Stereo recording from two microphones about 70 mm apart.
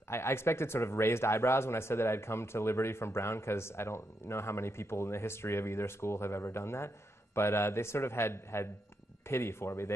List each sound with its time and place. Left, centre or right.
0.1 s speech: left